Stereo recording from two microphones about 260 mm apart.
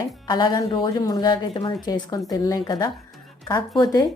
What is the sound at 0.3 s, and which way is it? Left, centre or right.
Speech, centre.